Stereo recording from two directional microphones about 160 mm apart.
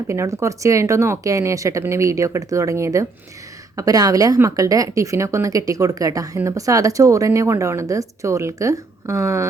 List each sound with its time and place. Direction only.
0.1 s a woman's voice: 20° right (ahead or behind)